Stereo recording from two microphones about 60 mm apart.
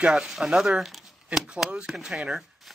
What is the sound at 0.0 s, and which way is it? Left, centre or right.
Speech, centre.